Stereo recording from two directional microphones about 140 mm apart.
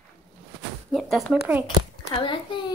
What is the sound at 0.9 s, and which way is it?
Speech, centre (ahead or behind).